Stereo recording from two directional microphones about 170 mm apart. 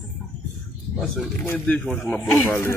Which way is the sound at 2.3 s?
15° left (ahead or behind).